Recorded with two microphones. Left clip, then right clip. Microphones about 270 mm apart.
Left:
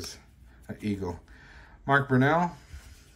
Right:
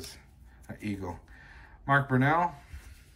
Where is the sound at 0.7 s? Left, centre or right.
Centre.